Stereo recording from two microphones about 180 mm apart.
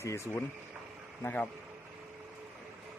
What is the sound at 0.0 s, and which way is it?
Speech, 15° left (ahead or behind).